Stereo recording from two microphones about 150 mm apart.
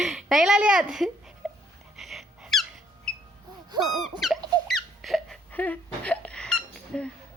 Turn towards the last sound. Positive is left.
turn(degrees=5)  # may be behind; listen again after turning